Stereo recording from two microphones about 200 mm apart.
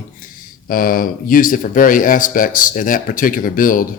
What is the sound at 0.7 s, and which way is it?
Speech, 45° left (ahead or behind).